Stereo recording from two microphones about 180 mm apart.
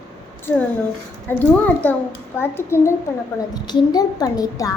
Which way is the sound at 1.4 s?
10° left (ahead or behind).